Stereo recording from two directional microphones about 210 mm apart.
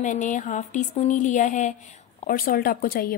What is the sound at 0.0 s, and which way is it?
Speech, 35° left (ahead or behind).